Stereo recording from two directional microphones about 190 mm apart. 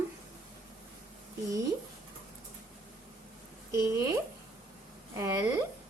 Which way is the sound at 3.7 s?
15° right (ahead or behind).